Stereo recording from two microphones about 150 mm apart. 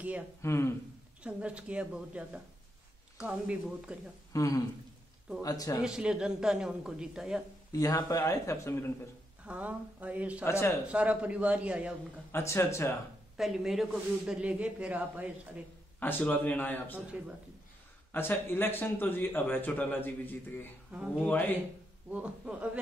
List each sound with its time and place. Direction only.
0.4 s a man's voice: 15° left (ahead or behind)
1.2 s a man's voice: 10° right (ahead or behind)
4.3 s speech: 20° left (ahead or behind)
5.8 s speech: 5° right (ahead or behind)
7.7 s speech: 25° left (ahead or behind)
9.4 s a man's voice: 10° right (ahead or behind)
10.4 s a man's voice: 15° left (ahead or behind)
10.9 s a man's voice: 10° right (ahead or behind)
12.3 s a man's voice: 15° left (ahead or behind)
13.4 s a man's voice: 5° right (ahead or behind)
16.0 s a man's voice: 15° left (ahead or behind)
18.1 s a man's voice: 15° left (ahead or behind)
20.9 s a man's voice: 5° right (ahead or behind)